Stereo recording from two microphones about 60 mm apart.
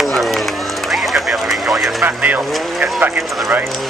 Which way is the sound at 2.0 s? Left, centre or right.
Right.